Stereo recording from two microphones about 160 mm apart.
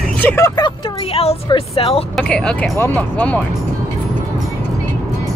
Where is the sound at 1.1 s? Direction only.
35° left (ahead or behind).